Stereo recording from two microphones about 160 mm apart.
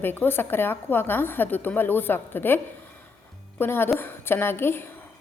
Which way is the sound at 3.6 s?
15° left (ahead or behind).